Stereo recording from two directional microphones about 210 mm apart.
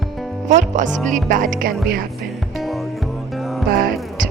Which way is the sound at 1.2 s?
40° right (ahead or behind).